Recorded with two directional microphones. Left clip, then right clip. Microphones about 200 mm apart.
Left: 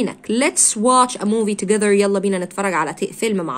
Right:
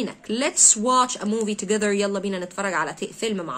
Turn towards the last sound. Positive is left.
turn(degrees=35)  # may be behind; listen again after turning